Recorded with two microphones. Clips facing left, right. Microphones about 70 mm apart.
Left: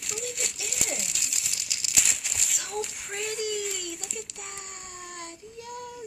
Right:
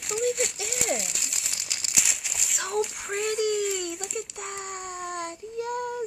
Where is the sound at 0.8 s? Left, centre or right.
Centre.